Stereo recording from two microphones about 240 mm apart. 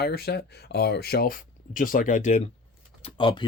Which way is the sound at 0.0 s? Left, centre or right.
Left.